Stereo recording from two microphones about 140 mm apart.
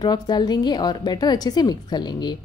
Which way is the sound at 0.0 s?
30° left (ahead or behind).